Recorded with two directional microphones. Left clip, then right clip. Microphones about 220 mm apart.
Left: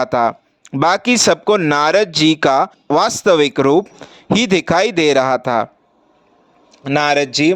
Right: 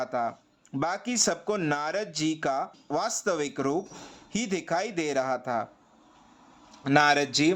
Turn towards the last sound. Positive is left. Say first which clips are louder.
# left 9 dB
turn(degrees=35)  # may be behind; listen again after turning